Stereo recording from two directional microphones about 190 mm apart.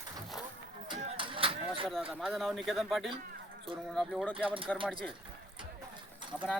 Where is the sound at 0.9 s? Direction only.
25° right (ahead or behind).